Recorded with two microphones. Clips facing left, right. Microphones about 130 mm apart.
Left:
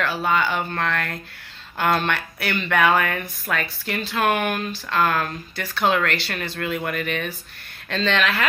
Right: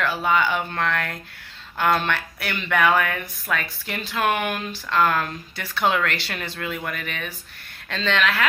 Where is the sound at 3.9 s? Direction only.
15° right (ahead or behind).